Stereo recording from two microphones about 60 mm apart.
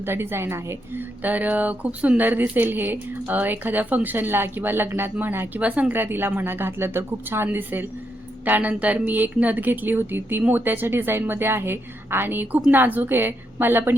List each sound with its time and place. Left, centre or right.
0.0 s speech: right
1.2 s speech: right
5.5 s a woman's voice: right
6.0 s speech: right